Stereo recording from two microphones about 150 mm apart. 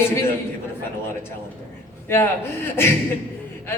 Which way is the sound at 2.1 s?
15° left (ahead or behind).